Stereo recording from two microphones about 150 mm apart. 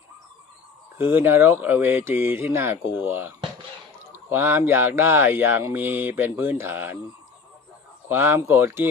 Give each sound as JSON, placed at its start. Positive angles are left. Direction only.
{"t": 0.9, "sound": "speech", "side_deg": -15}
{"t": 8.0, "sound": "speech", "side_deg": -15}